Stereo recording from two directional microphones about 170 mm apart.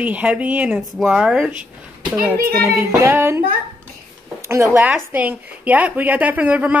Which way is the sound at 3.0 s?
15° right (ahead or behind).